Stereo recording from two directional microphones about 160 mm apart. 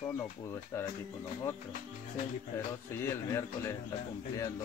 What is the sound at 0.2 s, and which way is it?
Speech, 15° left (ahead or behind).